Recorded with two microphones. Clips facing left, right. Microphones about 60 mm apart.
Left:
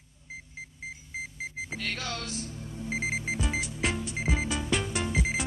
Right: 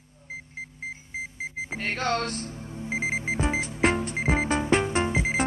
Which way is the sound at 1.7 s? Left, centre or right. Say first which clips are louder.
Right 10 dB; right.